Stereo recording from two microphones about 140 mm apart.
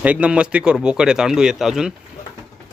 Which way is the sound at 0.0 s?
10° right (ahead or behind).